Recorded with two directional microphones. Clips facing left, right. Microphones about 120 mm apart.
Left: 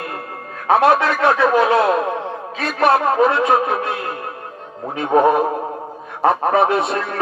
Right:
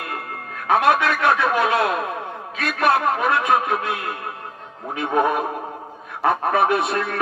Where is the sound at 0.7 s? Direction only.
30° left (ahead or behind).